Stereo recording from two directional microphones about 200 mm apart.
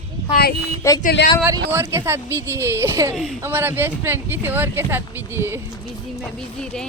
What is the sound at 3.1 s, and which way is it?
Speech, centre (ahead or behind).